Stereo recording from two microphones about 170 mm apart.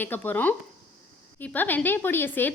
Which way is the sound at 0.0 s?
10° left (ahead or behind).